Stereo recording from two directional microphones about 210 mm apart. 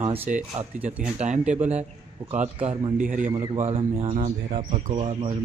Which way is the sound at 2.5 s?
35° right (ahead or behind).